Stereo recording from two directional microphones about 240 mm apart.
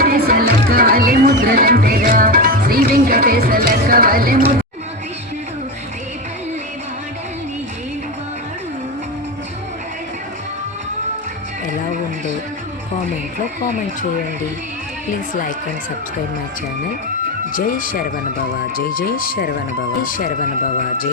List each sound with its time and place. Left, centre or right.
0.0 s speech: right
17.5 s speech: left